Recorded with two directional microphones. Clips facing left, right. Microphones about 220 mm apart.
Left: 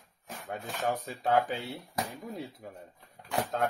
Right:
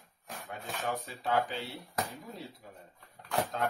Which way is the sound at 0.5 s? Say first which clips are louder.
Left 4 dB; 45° left (ahead or behind).